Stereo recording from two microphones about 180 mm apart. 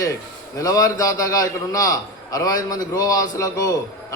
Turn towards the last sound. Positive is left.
turn(degrees=20)  # may be behind; listen again after turning